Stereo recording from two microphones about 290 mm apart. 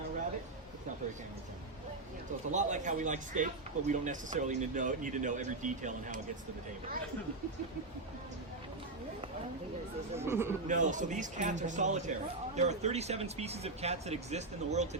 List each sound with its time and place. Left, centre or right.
2.5 s a man's voice: right
10.2 s speech: centre
10.7 s a man's voice: right